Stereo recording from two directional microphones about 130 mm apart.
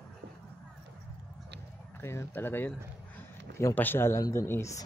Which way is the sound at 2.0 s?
20° left (ahead or behind).